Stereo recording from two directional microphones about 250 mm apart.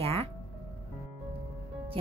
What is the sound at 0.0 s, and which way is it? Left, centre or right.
Music, right.